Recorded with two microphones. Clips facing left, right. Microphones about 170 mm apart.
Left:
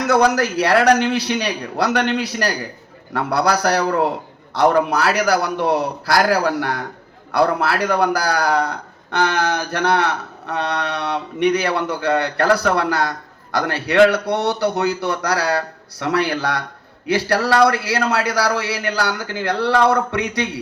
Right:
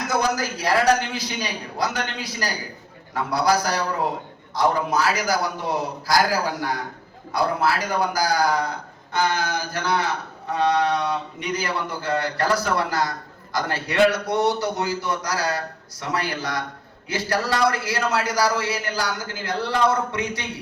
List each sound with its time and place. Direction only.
0.0 s a man's voice: 65° left (ahead or behind)